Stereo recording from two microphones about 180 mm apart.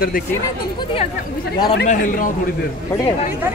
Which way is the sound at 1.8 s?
45° left (ahead or behind).